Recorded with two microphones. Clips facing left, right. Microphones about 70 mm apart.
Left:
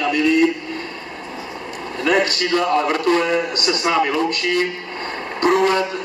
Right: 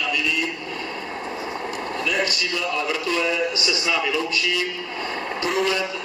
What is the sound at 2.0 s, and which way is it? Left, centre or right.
A man's voice, left.